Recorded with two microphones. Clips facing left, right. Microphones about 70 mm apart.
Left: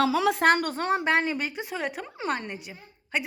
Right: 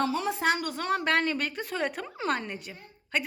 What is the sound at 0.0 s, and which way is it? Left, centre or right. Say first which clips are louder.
Speech: left 5 dB; left.